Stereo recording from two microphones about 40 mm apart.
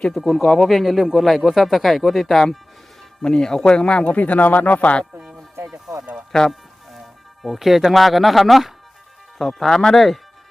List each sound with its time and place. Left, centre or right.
0.2 s speech: centre
0.4 s speech: centre
0.7 s speech: centre
3.2 s speech: left
4.1 s speech: left
7.4 s speech: centre
9.6 s speech: centre
9.9 s speech: centre